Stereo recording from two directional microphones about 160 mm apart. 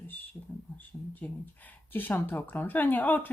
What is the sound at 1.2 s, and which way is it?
Speech, 15° left (ahead or behind).